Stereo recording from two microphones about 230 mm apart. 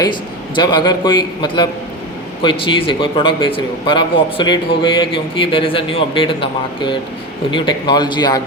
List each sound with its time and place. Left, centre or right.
0.0 s a man's voice: centre